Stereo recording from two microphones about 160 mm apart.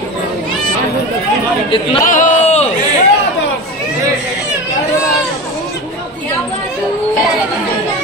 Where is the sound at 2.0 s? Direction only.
50° left (ahead or behind).